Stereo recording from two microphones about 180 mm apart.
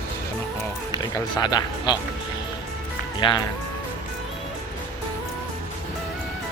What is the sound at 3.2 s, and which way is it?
Speech, 25° left (ahead or behind).